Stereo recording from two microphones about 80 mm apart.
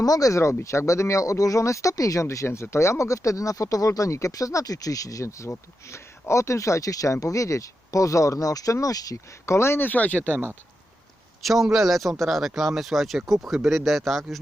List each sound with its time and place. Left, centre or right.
0.0 s speech: left
9.6 s speech: left
11.4 s speech: centre